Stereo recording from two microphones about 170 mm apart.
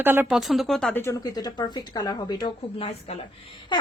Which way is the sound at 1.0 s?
20° left (ahead or behind).